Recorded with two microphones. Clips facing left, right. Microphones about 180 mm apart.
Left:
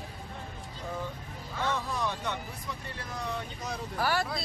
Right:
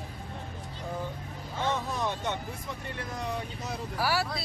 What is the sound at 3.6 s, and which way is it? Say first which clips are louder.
Vehicle: even; 5° right (ahead or behind).